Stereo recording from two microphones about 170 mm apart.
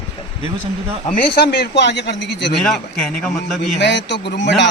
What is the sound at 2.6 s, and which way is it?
A man's voice, 5° left (ahead or behind).